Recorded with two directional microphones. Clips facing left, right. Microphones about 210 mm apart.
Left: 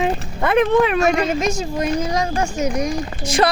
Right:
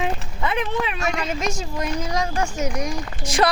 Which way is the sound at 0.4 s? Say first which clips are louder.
Left 9 dB; 55° left (ahead or behind).